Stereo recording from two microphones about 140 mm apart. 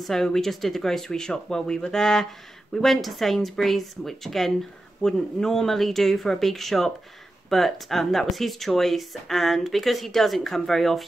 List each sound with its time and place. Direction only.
0.0 s speech: 5° left (ahead or behind)